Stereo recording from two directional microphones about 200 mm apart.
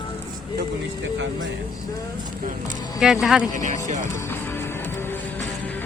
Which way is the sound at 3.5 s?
40° right (ahead or behind).